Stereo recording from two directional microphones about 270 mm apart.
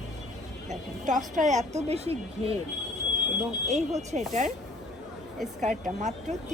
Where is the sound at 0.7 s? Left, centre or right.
Right.